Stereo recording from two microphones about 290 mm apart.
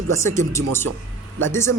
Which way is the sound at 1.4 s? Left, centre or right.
Centre.